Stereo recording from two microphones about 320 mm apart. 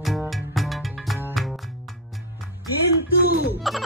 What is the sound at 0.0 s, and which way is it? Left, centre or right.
Music, centre.